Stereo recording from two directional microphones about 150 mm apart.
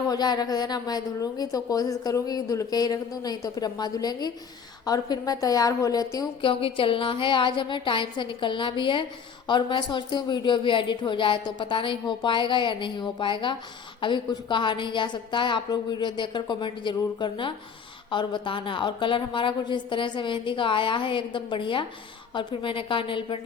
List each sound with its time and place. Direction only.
0.1 s a woman's voice: 25° left (ahead or behind)
6.4 s a woman's voice: 35° left (ahead or behind)